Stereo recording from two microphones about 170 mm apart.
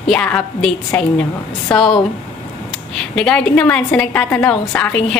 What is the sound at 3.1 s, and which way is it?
A woman's voice, 5° left (ahead or behind).